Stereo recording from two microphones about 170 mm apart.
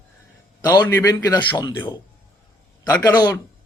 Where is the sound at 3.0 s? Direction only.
20° left (ahead or behind).